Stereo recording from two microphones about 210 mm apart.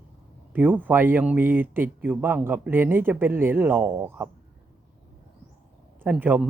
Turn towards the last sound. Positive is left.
turn(degrees=-5)  # may be behind; listen again after turning